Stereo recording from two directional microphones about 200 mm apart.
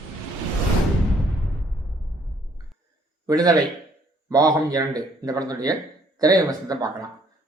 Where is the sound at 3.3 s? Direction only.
20° right (ahead or behind).